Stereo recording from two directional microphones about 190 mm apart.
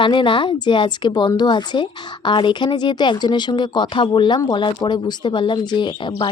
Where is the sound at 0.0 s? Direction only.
25° left (ahead or behind).